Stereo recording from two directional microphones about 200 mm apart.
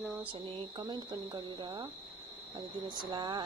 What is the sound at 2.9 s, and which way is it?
Speech, 20° right (ahead or behind).